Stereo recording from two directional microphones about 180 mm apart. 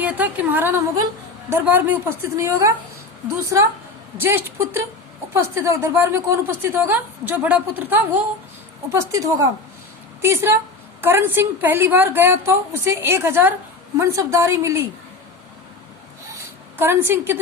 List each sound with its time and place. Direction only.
0.0 s a woman's voice: 10° right (ahead or behind)
16.7 s a woman's voice: 10° right (ahead or behind)